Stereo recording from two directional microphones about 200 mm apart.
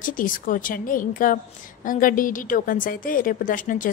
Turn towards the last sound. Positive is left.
turn(degrees=40)  # may be behind; listen again after turning